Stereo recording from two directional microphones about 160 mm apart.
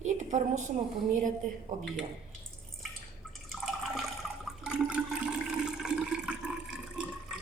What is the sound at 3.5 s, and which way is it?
Water, centre (ahead or behind).